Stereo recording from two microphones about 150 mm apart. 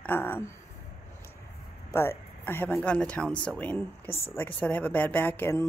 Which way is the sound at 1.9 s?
15° left (ahead or behind).